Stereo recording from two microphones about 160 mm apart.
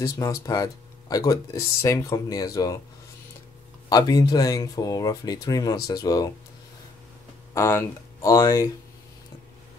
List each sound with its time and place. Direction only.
0.0 s speech: 25° left (ahead or behind)
3.9 s speech: 25° left (ahead or behind)
7.5 s speech: 15° left (ahead or behind)